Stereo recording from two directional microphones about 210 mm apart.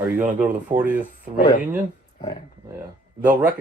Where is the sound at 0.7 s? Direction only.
20° right (ahead or behind).